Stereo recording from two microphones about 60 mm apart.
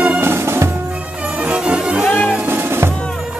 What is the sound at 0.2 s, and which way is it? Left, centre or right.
Music, right.